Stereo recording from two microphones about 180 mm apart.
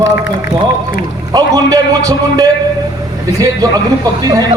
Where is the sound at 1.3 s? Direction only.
20° right (ahead or behind).